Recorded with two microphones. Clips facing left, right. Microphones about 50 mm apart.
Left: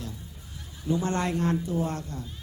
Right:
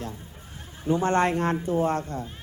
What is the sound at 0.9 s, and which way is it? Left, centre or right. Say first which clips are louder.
A woman's voice: right 5 dB; right.